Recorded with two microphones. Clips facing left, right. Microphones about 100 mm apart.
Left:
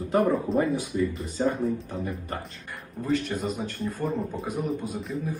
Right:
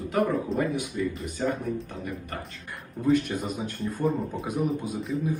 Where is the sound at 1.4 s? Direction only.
30° left (ahead or behind).